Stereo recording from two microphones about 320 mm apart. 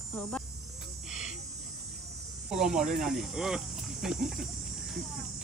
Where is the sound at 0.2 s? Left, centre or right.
Centre.